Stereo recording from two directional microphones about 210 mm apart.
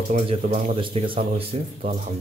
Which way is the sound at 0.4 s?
40° right (ahead or behind).